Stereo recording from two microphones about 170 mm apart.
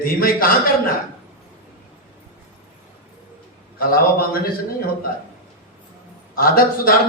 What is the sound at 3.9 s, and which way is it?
Speech, 60° left (ahead or behind).